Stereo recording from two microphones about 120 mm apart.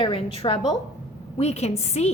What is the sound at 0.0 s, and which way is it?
Speech, 50° left (ahead or behind).